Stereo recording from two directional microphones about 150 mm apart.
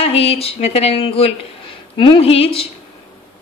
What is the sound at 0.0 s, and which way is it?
A woman's voice, 40° left (ahead or behind).